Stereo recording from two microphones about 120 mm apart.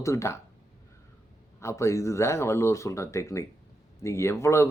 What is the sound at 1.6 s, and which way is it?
A man's voice, 25° left (ahead or behind).